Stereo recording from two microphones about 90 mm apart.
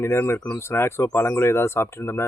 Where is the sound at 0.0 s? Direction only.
30° left (ahead or behind).